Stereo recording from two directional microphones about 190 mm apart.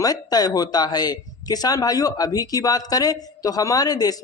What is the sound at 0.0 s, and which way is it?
Speech, 20° left (ahead or behind).